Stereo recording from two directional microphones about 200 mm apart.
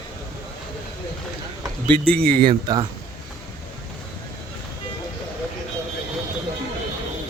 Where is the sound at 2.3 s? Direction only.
25° right (ahead or behind).